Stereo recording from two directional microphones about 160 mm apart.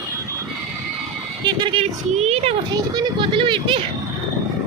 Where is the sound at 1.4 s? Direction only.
30° right (ahead or behind).